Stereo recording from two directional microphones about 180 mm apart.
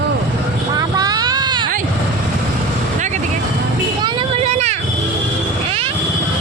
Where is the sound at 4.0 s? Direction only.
25° right (ahead or behind).